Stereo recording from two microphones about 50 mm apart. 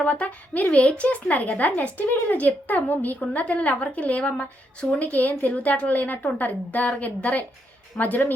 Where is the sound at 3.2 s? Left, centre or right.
Left.